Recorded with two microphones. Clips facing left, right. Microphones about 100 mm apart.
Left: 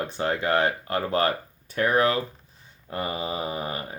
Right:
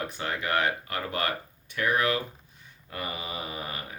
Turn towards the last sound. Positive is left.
turn(degrees=30)  # may be behind; listen again after turning